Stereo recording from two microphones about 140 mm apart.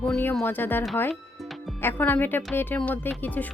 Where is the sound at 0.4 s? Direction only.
15° left (ahead or behind).